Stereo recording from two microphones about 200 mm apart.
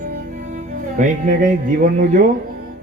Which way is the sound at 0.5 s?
45° right (ahead or behind).